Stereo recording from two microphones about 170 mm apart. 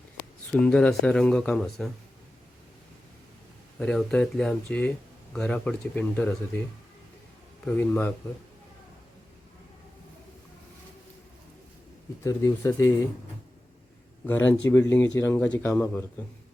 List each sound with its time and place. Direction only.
0.6 s speech: 5° left (ahead or behind)
3.8 s speech: 5° left (ahead or behind)
7.6 s speech: 10° left (ahead or behind)
12.2 s speech: 20° left (ahead or behind)
14.3 s speech: 10° left (ahead or behind)